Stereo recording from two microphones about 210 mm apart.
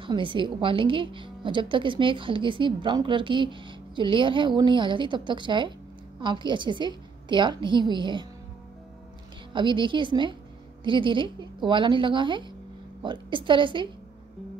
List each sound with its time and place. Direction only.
0.0 s a woman's voice: 25° right (ahead or behind)
9.5 s a woman's voice: 20° right (ahead or behind)